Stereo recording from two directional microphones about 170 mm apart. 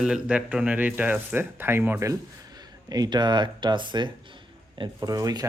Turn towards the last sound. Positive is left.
turn(degrees=-20)  # may be behind; listen again after turning